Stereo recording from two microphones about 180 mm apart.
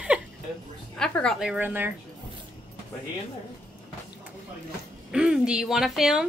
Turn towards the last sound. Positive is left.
turn(degrees=0)  # may be behind; listen again after turning